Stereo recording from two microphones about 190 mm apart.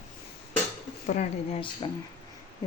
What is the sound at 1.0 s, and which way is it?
Speech, 35° left (ahead or behind).